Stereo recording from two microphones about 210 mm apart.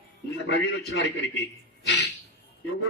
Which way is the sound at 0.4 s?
55° left (ahead or behind).